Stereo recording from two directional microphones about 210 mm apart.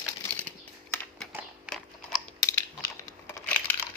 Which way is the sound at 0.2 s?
10° left (ahead or behind).